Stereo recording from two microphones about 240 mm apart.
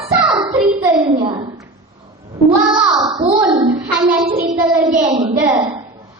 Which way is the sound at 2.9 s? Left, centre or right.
Centre.